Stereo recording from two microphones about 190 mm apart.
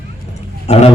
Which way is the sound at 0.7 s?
35° left (ahead or behind).